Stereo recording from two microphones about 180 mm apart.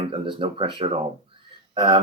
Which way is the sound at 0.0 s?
30° right (ahead or behind).